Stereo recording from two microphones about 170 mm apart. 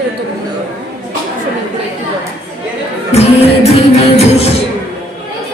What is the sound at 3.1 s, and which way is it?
Music, 35° left (ahead or behind).